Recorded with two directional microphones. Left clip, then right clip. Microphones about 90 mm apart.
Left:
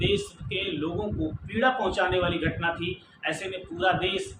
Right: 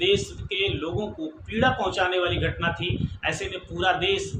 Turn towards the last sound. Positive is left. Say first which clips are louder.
# right 2 dB
turn(degrees=-35)  # may be behind; listen again after turning